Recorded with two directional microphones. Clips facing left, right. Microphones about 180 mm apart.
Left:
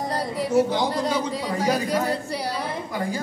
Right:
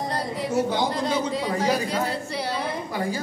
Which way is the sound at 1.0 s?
10° left (ahead or behind).